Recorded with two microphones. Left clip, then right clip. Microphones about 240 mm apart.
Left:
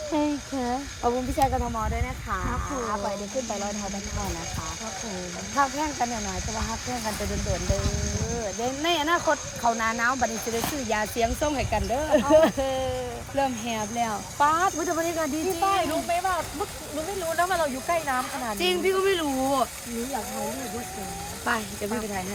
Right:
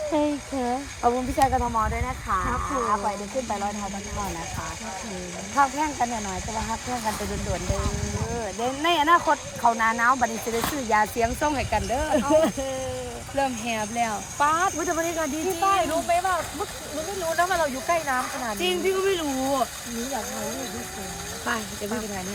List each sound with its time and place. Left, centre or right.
0.1 s speech: centre
1.0 s speech: right
5.6 s speech: right
8.8 s speech: centre
10.7 s speech: right
11.2 s speech: centre
17.5 s speech: centre
21.4 s speech: centre